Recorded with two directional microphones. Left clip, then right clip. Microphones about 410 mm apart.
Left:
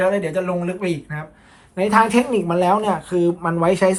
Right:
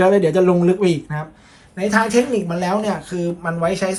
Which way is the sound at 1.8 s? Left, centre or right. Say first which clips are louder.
Left 1 dB; centre.